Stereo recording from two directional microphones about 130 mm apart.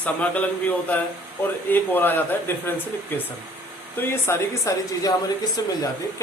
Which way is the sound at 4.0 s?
20° left (ahead or behind).